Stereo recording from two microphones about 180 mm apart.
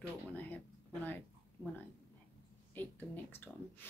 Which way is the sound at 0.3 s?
10° left (ahead or behind).